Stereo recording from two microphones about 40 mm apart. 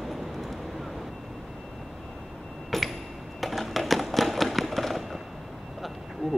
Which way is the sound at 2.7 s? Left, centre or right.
Centre.